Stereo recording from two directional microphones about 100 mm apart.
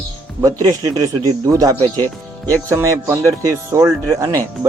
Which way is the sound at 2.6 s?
30° right (ahead or behind).